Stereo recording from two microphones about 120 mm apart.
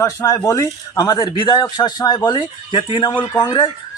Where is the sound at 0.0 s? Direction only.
25° left (ahead or behind).